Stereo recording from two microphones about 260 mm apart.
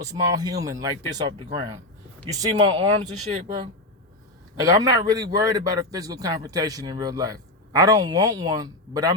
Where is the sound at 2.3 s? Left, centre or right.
Centre.